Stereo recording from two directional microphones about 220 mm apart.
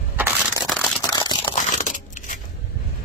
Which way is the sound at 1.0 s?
20° left (ahead or behind).